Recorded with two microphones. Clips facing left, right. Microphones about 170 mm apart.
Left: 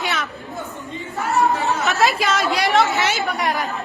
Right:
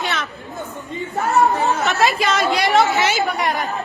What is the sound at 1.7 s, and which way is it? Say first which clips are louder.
Speech: right 1 dB; centre (ahead or behind).